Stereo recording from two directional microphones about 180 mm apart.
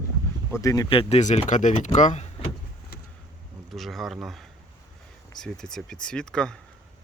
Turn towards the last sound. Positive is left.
turn(degrees=5)  # may be behind; listen again after turning